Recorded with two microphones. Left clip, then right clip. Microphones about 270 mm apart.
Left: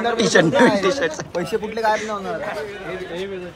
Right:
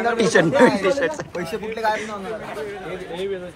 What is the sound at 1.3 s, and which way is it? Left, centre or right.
Speech, left.